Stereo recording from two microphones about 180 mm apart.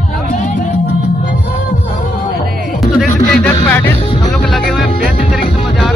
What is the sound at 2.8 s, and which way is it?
Speech, 5° left (ahead or behind).